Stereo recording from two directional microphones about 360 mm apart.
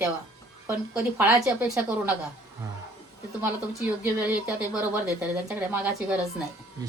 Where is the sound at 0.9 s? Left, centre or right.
Centre.